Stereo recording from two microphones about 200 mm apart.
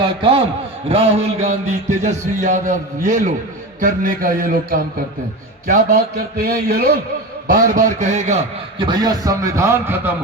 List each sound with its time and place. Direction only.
0.2 s a man's voice: 25° right (ahead or behind)
8.8 s a man's voice: 20° right (ahead or behind)